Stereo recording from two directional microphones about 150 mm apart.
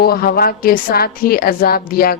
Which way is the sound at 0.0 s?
85° left.